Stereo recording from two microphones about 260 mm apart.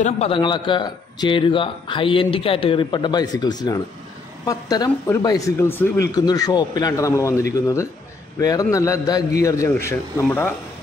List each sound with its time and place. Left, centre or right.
0.0 s a man's voice: left